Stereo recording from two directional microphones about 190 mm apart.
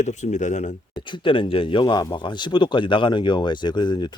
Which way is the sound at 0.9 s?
25° left (ahead or behind).